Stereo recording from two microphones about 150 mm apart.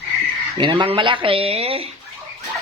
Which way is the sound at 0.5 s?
35° right (ahead or behind).